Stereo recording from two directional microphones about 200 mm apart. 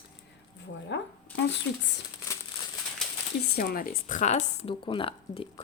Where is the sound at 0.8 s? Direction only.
60° left (ahead or behind).